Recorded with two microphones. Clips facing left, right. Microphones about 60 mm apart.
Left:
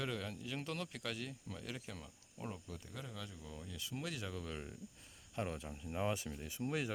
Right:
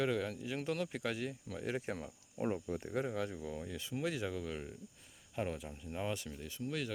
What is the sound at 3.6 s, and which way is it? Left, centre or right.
Speech, right.